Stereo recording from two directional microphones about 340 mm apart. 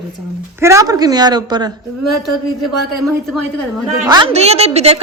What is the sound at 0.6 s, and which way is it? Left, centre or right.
A woman's voice, centre.